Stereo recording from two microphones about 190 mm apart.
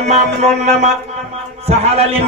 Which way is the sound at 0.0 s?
35° right (ahead or behind).